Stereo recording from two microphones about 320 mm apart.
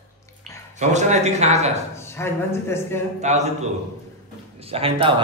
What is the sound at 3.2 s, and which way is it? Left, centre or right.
Speech, right.